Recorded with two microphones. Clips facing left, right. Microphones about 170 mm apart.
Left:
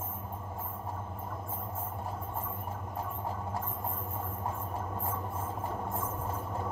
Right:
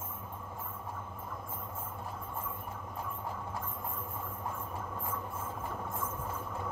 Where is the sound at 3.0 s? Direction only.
35° left (ahead or behind).